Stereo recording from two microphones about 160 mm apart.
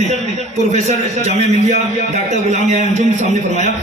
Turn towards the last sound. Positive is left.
turn(degrees=-45)  # may be behind; listen again after turning